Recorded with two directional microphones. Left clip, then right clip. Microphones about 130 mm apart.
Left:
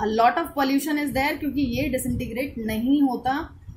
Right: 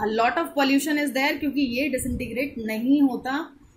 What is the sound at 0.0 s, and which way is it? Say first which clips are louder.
A woman's voice: left 2 dB; 5° right (ahead or behind).